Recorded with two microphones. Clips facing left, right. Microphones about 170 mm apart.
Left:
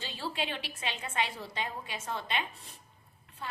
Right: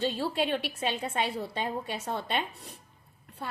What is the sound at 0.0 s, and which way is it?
A woman's voice, 65° right (ahead or behind).